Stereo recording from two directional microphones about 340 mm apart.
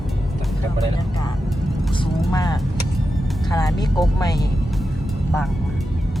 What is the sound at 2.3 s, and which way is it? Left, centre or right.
Speech, centre.